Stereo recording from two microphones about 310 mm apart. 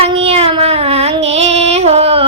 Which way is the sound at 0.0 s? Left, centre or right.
Centre.